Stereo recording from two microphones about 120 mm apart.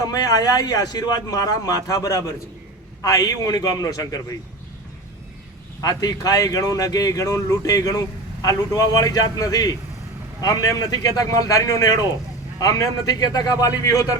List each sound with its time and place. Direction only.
0.0 s speech: 30° left (ahead or behind)
5.8 s a man's voice: 30° left (ahead or behind)